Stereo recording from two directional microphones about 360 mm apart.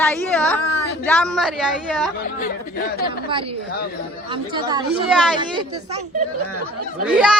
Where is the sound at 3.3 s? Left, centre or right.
Centre.